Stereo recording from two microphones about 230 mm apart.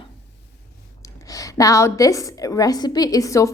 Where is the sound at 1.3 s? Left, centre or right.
Centre.